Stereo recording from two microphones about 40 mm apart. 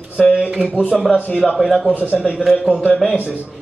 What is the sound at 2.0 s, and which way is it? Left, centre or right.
Speech, right.